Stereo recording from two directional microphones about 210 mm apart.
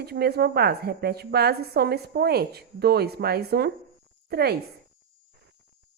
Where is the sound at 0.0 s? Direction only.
50° right (ahead or behind).